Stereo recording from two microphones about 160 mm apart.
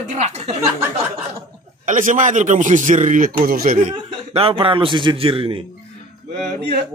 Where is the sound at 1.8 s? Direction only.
55° right (ahead or behind).